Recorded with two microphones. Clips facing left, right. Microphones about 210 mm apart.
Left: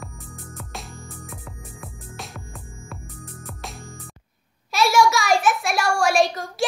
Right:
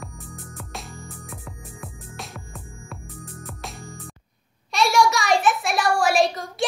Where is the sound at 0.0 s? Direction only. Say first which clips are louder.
Right 1 dB; centre (ahead or behind).